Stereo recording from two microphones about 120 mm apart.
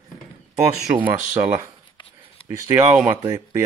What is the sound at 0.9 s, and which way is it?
Speech, 15° right (ahead or behind).